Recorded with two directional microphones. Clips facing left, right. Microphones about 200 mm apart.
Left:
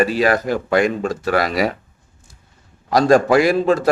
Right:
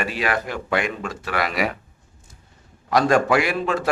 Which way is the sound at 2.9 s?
35° left (ahead or behind).